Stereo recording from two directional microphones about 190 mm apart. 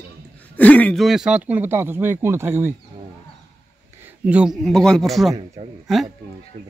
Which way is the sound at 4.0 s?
10° right (ahead or behind).